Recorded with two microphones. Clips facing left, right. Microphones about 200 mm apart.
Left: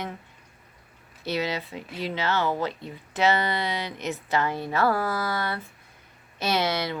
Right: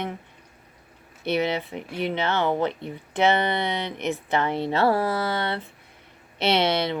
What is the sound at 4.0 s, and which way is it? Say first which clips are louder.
Speech: right 4 dB; 55° right (ahead or behind).